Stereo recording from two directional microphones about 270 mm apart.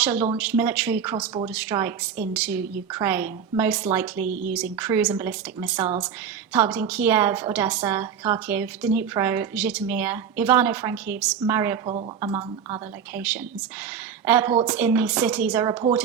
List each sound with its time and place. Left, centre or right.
0.0 s a woman's voice: centre
14.3 s a woman's voice: centre